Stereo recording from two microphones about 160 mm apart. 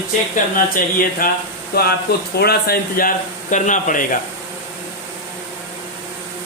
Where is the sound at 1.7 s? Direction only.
75° left (ahead or behind).